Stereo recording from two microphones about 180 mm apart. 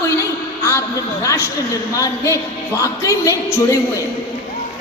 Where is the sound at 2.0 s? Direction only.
15° left (ahead or behind).